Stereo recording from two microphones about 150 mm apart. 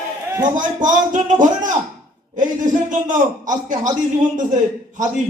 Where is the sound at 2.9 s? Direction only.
60° right (ahead or behind).